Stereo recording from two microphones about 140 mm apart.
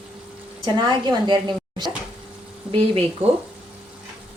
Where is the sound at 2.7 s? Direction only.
45° right (ahead or behind).